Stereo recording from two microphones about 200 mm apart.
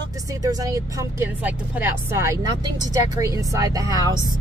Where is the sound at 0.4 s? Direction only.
20° right (ahead or behind).